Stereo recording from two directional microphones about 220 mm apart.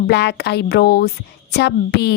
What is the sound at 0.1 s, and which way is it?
A woman's voice, 50° left (ahead or behind).